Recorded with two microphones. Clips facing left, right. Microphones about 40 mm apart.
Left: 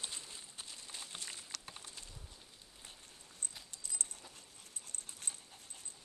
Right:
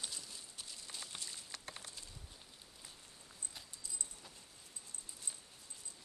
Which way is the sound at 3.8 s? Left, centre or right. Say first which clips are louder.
Left 5 dB; left.